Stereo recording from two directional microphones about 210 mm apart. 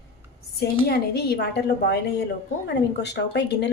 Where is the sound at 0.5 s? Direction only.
50° left (ahead or behind).